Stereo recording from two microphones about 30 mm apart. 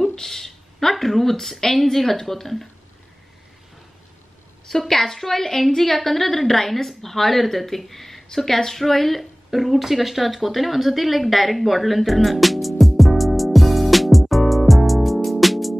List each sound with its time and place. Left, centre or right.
0.0 s a sound: centre
0.7 s speech: centre
4.6 s a woman's voice: centre